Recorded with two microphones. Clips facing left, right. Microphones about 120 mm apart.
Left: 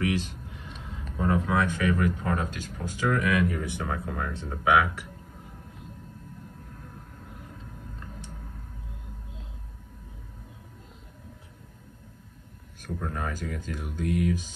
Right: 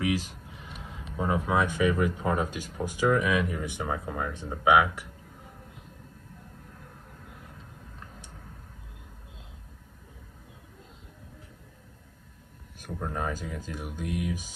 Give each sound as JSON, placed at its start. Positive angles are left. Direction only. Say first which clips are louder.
{"t": 1.1, "sound": "speech", "louder": "left 1 dB", "side_deg": -15}
{"t": 12.8, "sound": "speech", "louder": "right 1 dB", "side_deg": -15}